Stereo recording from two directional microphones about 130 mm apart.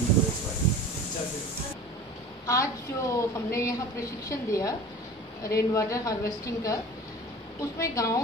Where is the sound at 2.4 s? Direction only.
25° left (ahead or behind).